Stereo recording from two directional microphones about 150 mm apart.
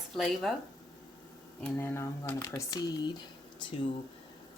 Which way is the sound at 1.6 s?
15° left (ahead or behind).